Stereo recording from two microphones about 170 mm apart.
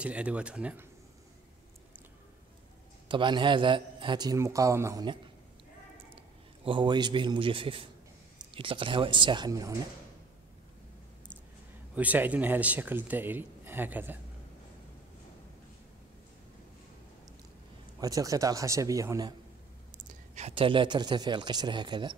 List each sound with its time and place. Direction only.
0.0 s speech: 5° right (ahead or behind)
3.1 s speech: 30° right (ahead or behind)
6.1 s a man's voice: 30° right (ahead or behind)
11.9 s speech: 10° right (ahead or behind)
18.0 s speech: 20° right (ahead or behind)
20.0 s speech: 40° right (ahead or behind)